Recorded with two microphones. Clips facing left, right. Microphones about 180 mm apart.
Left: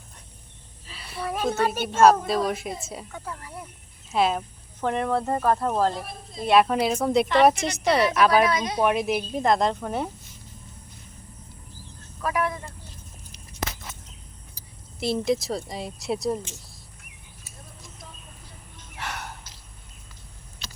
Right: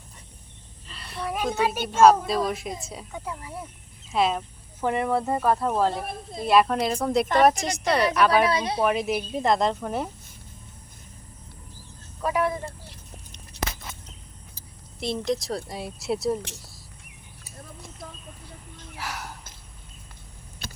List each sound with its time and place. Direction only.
0.9 s a sound: 5° left (ahead or behind)
1.5 s speech: 10° right (ahead or behind)
2.0 s speech: centre (ahead or behind)
3.1 s speech: 15° right (ahead or behind)
4.1 s speech: centre (ahead or behind)
4.8 s speech: 10° right (ahead or behind)
6.0 s a woman's voice: 55° right (ahead or behind)
6.4 s speech: centre (ahead or behind)
8.4 s speech: 30° right (ahead or behind)
8.8 s speech: centre (ahead or behind)
12.2 s speech: 25° right (ahead or behind)
15.0 s speech: 5° left (ahead or behind)
18.9 s gasp: centre (ahead or behind)
20.6 s typing: 55° right (ahead or behind)